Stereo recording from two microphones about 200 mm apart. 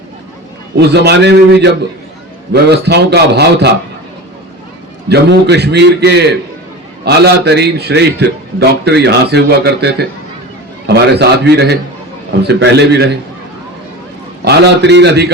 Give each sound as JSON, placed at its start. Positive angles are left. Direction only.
{"t": 0.8, "sound": "a man's voice", "side_deg": -55}
{"t": 5.0, "sound": "a man's voice", "side_deg": -55}
{"t": 14.4, "sound": "a man's voice", "side_deg": -55}